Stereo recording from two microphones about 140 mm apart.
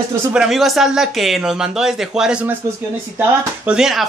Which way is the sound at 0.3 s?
5° right (ahead or behind).